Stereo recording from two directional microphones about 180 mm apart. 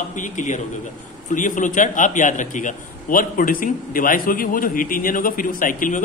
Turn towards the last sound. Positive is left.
turn(degrees=50)  # may be behind; listen again after turning